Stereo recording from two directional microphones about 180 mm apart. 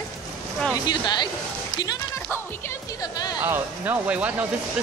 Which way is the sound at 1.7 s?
25° left (ahead or behind).